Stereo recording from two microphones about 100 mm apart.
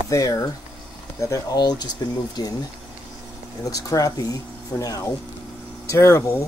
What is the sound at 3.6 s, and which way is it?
Speech, 35° left (ahead or behind).